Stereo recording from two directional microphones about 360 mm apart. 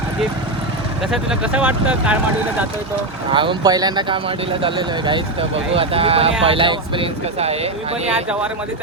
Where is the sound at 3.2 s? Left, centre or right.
Centre.